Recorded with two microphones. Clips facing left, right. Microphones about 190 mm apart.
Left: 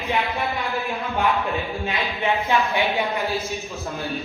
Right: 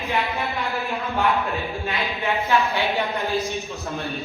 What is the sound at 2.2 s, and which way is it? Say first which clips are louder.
Speech: even; 15° left (ahead or behind).